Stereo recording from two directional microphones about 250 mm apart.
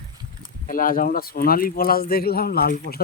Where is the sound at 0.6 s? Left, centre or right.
Left.